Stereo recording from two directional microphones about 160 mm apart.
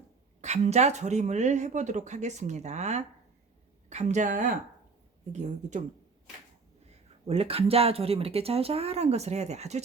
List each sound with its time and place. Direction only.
0.4 s speech: 45° right (ahead or behind)
7.3 s speech: 40° right (ahead or behind)